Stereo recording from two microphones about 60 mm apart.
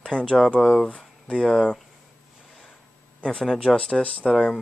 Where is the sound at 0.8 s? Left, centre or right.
Centre.